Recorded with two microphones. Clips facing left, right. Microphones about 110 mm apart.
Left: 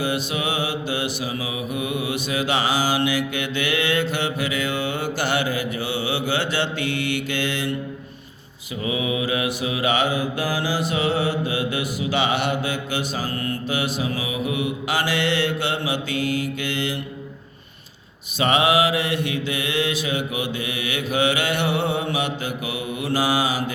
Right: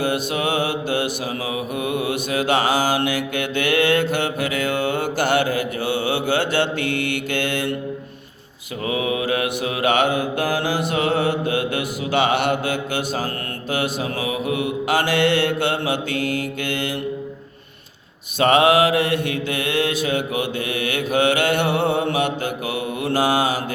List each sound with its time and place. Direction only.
0.0 s mantra: 50° right (ahead or behind)
8.9 s mantra: 45° right (ahead or behind)
18.3 s mantra: 50° right (ahead or behind)